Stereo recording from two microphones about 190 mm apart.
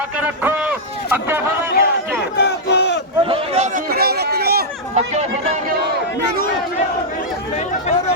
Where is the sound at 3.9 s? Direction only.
55° right (ahead or behind).